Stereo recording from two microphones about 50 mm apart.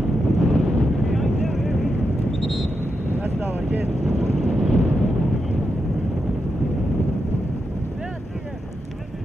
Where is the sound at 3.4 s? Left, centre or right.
Right.